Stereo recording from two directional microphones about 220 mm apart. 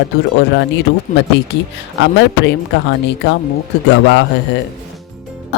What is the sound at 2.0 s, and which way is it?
A woman's voice, 55° left (ahead or behind).